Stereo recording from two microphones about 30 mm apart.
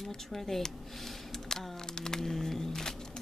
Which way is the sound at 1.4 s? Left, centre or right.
Centre.